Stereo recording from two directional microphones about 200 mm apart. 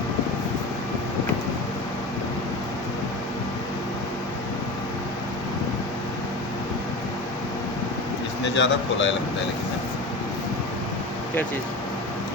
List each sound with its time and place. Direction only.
8.5 s speech: 65° left (ahead or behind)